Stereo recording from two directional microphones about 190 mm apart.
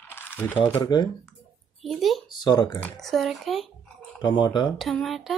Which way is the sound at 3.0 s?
Centre (ahead or behind).